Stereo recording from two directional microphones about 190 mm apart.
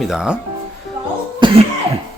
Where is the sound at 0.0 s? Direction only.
5° right (ahead or behind).